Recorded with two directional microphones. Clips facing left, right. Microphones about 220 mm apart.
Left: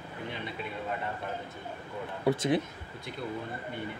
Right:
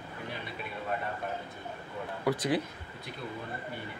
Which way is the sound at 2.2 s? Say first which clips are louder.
Left 2 dB; 25° left (ahead or behind).